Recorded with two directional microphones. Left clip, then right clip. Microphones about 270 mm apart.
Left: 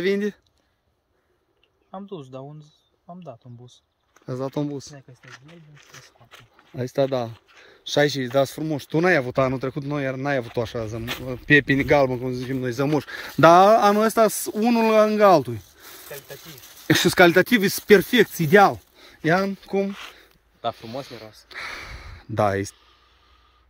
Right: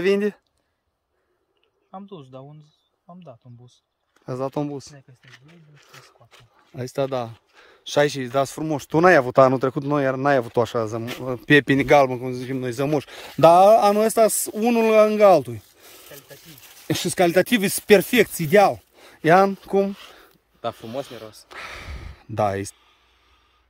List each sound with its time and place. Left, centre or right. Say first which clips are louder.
0.0 s speech: right 3 dB; centre
1.9 s speech: left 3 dB; centre
2.3 s a sound: left 3 dB; centre
3.3 s speech: left 4 dB; centre
16.8 s speech: left 5 dB; centre
18.9 s speech: right 6 dB; centre; by 21.5 s right
21.5 s speech: left 5 dB; centre